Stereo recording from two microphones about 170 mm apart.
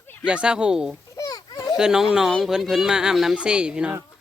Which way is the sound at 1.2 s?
20° left (ahead or behind).